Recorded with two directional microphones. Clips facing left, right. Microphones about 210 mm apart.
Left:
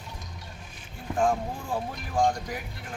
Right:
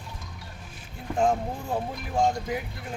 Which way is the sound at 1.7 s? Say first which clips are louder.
Right 1 dB; 20° right (ahead or behind).